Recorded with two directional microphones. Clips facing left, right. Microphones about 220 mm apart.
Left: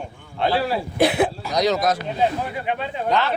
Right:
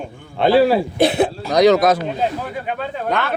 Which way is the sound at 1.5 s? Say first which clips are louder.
Right 7 dB; 60° right (ahead or behind).